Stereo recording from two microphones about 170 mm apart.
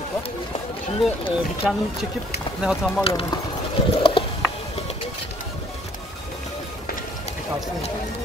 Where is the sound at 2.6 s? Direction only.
5° right (ahead or behind).